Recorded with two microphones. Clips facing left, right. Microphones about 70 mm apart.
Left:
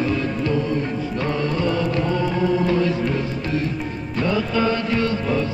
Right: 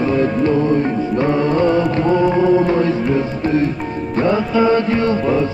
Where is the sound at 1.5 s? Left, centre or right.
Right.